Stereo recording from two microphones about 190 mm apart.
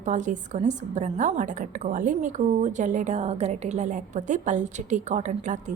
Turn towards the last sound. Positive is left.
turn(degrees=-40)  # may be behind; listen again after turning